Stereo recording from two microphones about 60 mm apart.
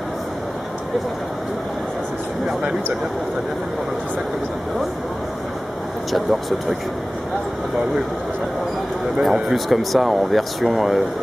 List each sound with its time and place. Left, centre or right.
6.1 s speech: centre
9.2 s speech: centre